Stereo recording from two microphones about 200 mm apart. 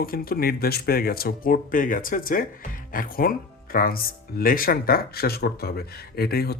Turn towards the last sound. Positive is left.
turn(degrees=50)  # may be behind; listen again after turning